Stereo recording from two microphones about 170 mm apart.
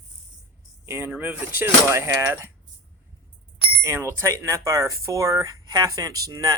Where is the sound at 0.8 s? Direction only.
15° right (ahead or behind).